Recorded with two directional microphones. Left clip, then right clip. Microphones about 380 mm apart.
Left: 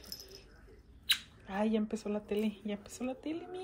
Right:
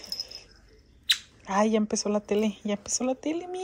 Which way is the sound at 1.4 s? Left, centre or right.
Right.